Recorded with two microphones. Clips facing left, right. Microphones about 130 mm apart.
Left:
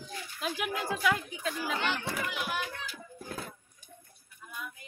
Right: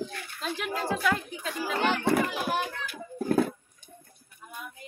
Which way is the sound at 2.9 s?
60° right (ahead or behind).